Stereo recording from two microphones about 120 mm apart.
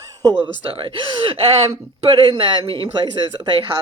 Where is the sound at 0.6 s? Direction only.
50° right (ahead or behind).